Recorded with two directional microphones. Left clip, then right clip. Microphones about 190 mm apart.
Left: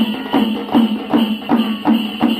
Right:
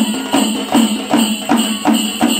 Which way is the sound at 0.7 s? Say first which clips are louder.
Right 1 dB; 50° right (ahead or behind).